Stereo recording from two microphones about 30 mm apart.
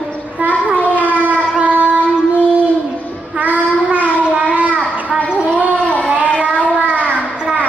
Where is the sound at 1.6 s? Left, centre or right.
Right.